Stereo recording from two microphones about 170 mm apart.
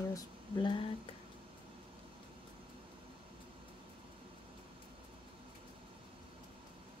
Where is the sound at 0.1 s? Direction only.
25° left (ahead or behind).